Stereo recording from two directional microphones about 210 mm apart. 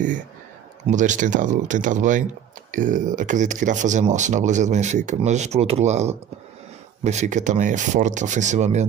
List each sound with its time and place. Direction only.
0.8 s speech: 35° right (ahead or behind)